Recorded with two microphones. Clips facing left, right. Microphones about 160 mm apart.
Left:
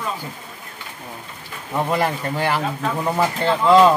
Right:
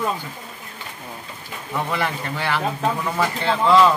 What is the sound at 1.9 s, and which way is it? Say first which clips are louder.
Speech: left 6 dB; 40° left (ahead or behind).